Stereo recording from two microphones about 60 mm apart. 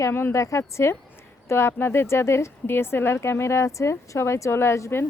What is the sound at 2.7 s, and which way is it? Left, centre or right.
Speech, left.